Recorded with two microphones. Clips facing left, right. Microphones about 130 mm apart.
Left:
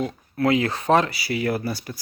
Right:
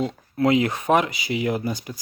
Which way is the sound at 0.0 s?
20° right (ahead or behind).